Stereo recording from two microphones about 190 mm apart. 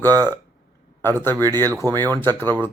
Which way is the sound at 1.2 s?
10° left (ahead or behind).